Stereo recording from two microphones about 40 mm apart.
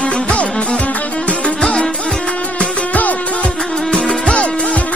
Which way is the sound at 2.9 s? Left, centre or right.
Left.